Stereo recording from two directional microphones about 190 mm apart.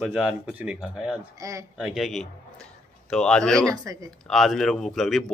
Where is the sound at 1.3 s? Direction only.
15° right (ahead or behind).